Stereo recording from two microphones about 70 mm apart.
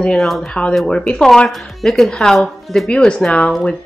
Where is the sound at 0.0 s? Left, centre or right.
Centre.